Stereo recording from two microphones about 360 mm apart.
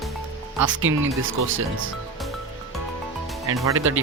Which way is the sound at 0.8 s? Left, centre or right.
Right.